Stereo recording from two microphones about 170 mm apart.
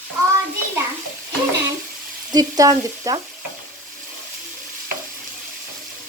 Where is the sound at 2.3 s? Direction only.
20° right (ahead or behind).